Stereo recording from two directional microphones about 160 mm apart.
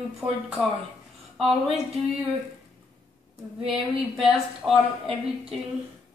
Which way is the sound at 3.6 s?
5° right (ahead or behind).